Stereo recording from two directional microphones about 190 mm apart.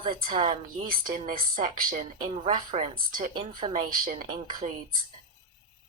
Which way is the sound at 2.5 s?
35° right (ahead or behind).